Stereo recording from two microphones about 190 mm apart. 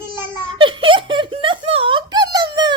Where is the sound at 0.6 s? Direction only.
25° right (ahead or behind).